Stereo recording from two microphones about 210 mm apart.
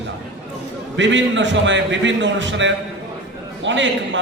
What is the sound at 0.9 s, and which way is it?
A man's voice, 60° right (ahead or behind).